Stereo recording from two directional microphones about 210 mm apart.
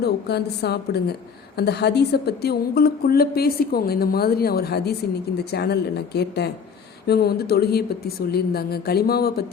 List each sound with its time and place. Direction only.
0.0 s speech: 50° left (ahead or behind)